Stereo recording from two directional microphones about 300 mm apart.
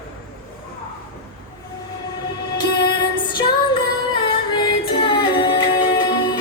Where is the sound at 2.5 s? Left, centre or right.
Centre.